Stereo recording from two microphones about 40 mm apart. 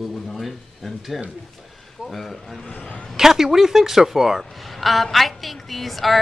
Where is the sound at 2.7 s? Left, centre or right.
Left.